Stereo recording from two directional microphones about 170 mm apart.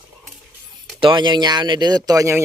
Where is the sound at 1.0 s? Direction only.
30° right (ahead or behind).